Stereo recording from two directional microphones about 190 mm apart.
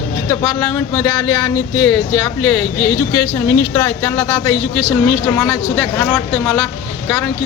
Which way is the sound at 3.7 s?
15° left (ahead or behind).